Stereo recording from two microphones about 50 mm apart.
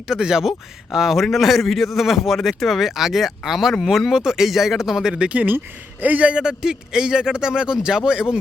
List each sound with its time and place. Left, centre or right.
0.1 s a man's voice: centre; by 6.3 s right
6.3 s speech: centre